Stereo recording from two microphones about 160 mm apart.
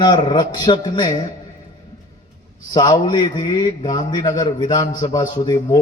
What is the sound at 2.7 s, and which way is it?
A man's voice, 25° left (ahead or behind).